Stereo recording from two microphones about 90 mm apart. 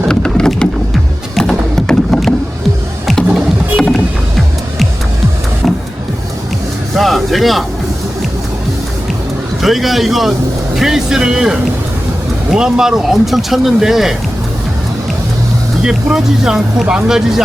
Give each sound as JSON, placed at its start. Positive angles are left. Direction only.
{"t": 0.1, "sound": "a sound", "side_deg": 10}
{"t": 1.4, "sound": "music", "side_deg": 5}
{"t": 3.8, "sound": "music", "side_deg": 5}
{"t": 5.6, "sound": "vehicle", "side_deg": 0}
{"t": 6.9, "sound": "vehicle", "side_deg": 0}
{"t": 9.6, "sound": "speech", "side_deg": 0}
{"t": 15.8, "sound": "speech", "side_deg": -5}